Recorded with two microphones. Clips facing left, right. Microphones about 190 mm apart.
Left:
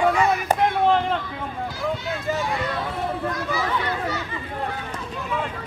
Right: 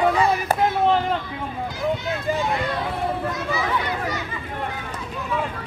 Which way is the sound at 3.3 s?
20° right (ahead or behind).